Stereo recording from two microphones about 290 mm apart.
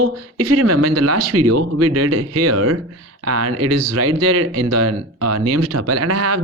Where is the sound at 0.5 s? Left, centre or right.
Right.